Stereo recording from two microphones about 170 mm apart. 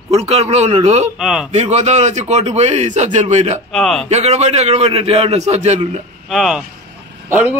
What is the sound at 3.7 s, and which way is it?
Speech, 5° left (ahead or behind).